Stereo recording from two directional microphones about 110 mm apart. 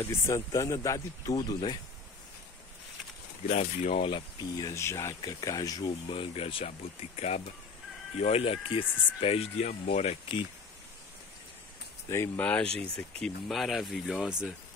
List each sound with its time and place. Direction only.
0.0 s speech: 25° left (ahead or behind)
1.3 s speech: 40° left (ahead or behind)
3.4 s speech: 85° left; by 4.2 s 60° left (ahead or behind)
4.4 s speech: 35° left (ahead or behind)
4.7 s speech: 25° left (ahead or behind)
6.0 s speech: 50° left (ahead or behind); by 10.1 s 85° left
12.1 s speech: 25° left (ahead or behind)
12.7 s speech: 5° left (ahead or behind)